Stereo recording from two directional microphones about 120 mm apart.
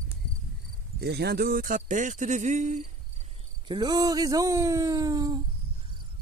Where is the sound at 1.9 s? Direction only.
90° right.